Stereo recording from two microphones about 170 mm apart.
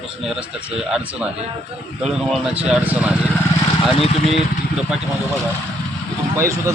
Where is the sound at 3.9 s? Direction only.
35° left (ahead or behind).